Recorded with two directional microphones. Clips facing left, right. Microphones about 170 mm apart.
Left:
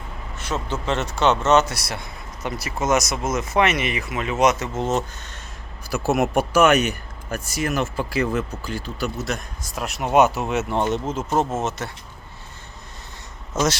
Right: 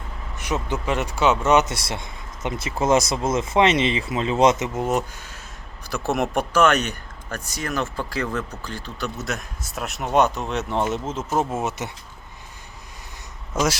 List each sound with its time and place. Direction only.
0.3 s speech: 15° right (ahead or behind)
1.7 s speech: 25° right (ahead or behind); by 5.4 s 10° right (ahead or behind)
5.9 s speech: 5° left (ahead or behind)